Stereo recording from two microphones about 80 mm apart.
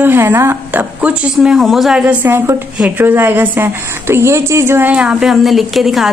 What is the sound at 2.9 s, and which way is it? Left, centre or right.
Speech, right.